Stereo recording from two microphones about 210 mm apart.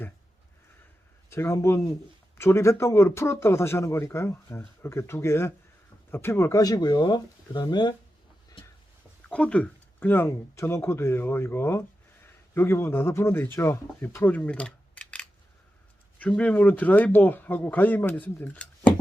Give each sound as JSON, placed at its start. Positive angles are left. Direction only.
{"t": 1.3, "sound": "speech", "side_deg": 10}
{"t": 9.3, "sound": "speech", "side_deg": 5}